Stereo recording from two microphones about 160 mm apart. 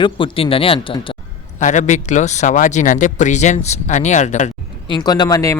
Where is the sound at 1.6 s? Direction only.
50° left (ahead or behind).